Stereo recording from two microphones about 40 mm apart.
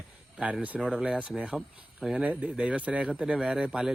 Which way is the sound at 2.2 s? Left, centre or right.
Right.